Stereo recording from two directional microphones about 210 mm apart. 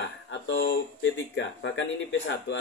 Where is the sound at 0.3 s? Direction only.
60° left (ahead or behind).